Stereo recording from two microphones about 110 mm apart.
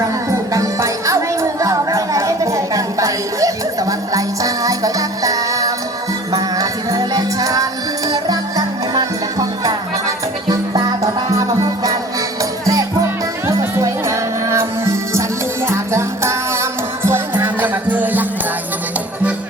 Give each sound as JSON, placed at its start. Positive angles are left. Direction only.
{"t": 0.5, "sound": "music", "side_deg": -30}